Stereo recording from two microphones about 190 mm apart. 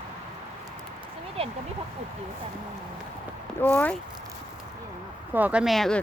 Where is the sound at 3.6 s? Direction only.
10° left (ahead or behind).